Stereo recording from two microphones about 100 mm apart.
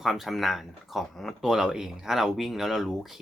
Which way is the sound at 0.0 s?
Centre (ahead or behind).